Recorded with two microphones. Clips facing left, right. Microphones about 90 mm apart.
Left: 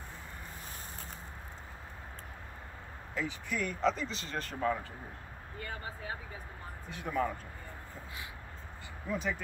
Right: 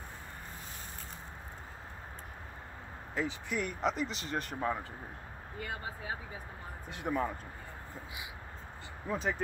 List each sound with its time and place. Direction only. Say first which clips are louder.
3.2 s speech: right 1 dB; 20° right (ahead or behind)
9.1 s speech: right 1 dB; 35° right (ahead or behind)